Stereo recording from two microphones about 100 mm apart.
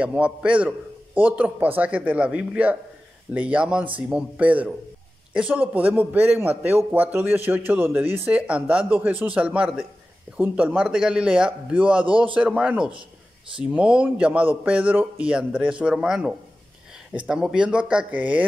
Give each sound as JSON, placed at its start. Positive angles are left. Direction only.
{"t": 0.0, "sound": "a man's voice", "side_deg": -10}